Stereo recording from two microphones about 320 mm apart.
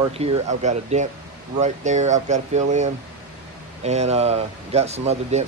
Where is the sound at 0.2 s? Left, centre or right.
Centre.